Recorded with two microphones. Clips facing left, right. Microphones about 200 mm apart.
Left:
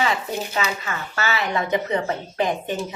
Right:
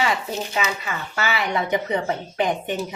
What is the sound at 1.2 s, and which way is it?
Speech, 15° right (ahead or behind).